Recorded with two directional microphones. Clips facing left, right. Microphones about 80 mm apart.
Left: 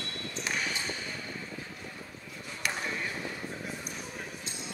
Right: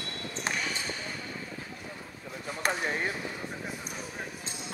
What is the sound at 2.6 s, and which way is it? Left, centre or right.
Basketball bounce, right.